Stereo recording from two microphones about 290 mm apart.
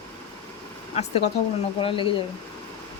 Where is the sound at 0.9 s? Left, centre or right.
Left.